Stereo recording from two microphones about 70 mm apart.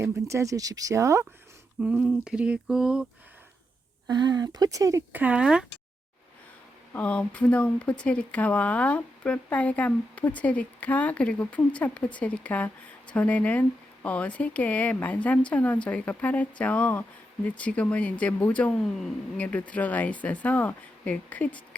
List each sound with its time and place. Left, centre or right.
0.0 s speech: right
1.8 s a sound: centre
4.1 s speech: right
5.1 s speech: right
5.4 s a sound: centre
6.9 s speech: centre